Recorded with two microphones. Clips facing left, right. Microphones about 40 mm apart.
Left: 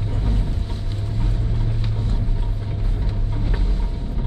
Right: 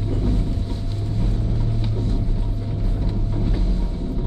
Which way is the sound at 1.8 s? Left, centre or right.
Left.